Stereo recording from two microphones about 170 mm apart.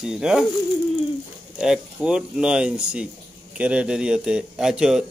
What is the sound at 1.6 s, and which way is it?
Speech, 5° right (ahead or behind).